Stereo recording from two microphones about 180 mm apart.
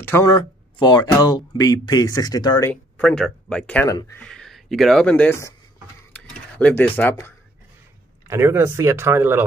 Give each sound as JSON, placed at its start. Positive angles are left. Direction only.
{"t": 0.0, "sound": "speech", "side_deg": 15}
{"t": 2.7, "sound": "speech", "side_deg": 5}
{"t": 6.1, "sound": "a sound", "side_deg": 10}
{"t": 8.3, "sound": "speech", "side_deg": -15}